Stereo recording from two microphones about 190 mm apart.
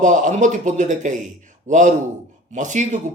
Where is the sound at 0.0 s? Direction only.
40° right (ahead or behind).